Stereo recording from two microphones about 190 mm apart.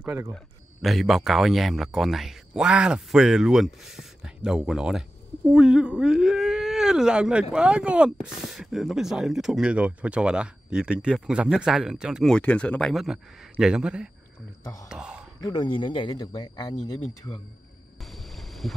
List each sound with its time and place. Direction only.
0.0 s a man's voice: 15° right (ahead or behind)
0.8 s speech: centre (ahead or behind)
14.6 s speech: 20° left (ahead or behind)
14.9 s a sound: 5° right (ahead or behind)
15.4 s speech: 25° left (ahead or behind)
18.0 s boat: centre (ahead or behind)